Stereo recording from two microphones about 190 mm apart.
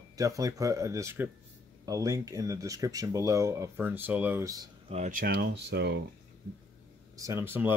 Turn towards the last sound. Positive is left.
turn(degrees=-10)  # may be behind; listen again after turning